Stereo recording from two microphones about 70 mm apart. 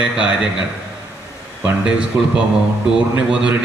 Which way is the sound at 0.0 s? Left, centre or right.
Centre.